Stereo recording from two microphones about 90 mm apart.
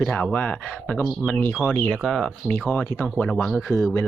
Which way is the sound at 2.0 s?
5° left (ahead or behind).